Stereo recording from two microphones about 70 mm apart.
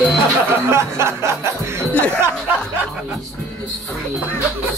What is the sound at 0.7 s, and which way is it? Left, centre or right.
Music, right.